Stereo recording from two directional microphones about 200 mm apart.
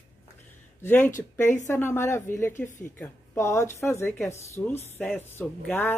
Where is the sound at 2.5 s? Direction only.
40° left (ahead or behind).